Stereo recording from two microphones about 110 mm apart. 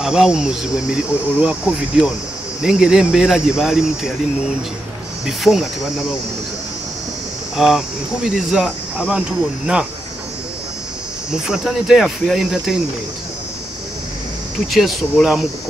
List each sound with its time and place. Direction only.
0.0 s speech: 5° right (ahead or behind)
5.2 s speech: 5° right (ahead or behind)
7.5 s speech: 5° right (ahead or behind)
11.3 s speech: 5° right (ahead or behind)
14.7 s speech: centre (ahead or behind)